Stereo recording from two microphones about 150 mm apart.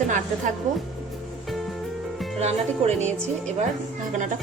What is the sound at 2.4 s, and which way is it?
Speech, 50° right (ahead or behind).